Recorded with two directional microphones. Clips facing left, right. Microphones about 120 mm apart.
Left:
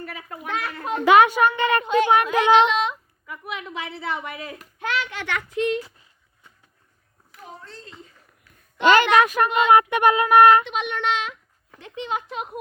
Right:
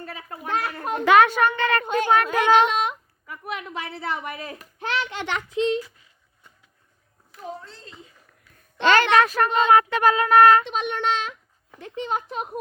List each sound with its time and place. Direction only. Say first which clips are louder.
0.0 s a child's voice: left 1 dB; 30° right (ahead or behind)
0.5 s a child's voice: right 1 dB; 45° right (ahead or behind)
1.0 s a woman's voice: left 1 dB; 15° left (ahead or behind)
1.8 s a child's voice: left 3 dB; 45° right (ahead or behind); by 5.8 s 20° right (ahead or behind)
7.6 s speech: left 2 dB; 5° right (ahead or behind)
8.8 s a woman's voice: left 1 dB; 15° left (ahead or behind)
10.7 s a woman's voice: even; 35° right (ahead or behind)